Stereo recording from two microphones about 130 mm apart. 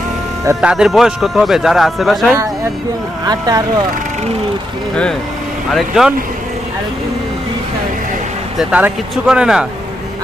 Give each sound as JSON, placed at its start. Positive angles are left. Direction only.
{"t": 0.6, "sound": "speech", "side_deg": -5}
{"t": 3.3, "sound": "speech", "side_deg": -30}
{"t": 5.7, "sound": "speech", "side_deg": 0}
{"t": 8.5, "sound": "speech", "side_deg": -10}